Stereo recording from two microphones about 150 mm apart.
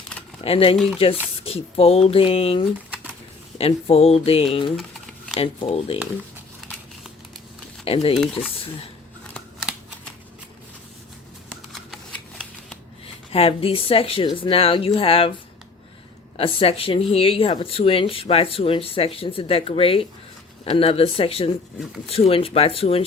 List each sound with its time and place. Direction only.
0.4 s speech: 40° left (ahead or behind)
6.6 s crumpling: centre (ahead or behind)
7.9 s speech: 40° left (ahead or behind)
9.3 s shuffling cards: centre (ahead or behind)
13.3 s speech: 40° left (ahead or behind)
16.4 s speech: 40° left (ahead or behind)